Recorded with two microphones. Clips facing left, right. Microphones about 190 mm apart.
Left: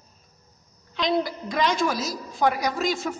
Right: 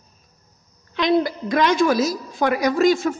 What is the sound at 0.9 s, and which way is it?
A woman's voice, 60° right (ahead or behind).